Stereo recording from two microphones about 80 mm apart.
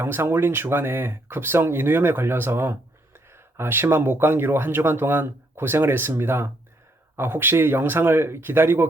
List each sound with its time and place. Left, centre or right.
0.0 s speech: right